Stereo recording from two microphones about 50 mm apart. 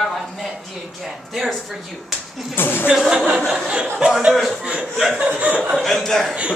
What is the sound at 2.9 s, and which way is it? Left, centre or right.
Speech, centre.